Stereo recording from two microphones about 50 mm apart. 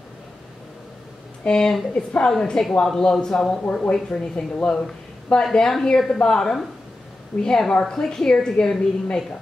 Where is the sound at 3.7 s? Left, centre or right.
Left.